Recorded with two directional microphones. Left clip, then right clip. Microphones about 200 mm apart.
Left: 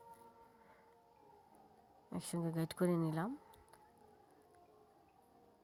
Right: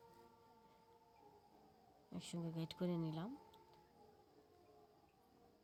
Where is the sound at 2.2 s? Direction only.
30° left (ahead or behind).